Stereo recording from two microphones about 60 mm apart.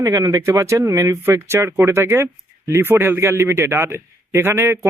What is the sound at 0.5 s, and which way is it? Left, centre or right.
Speech, right.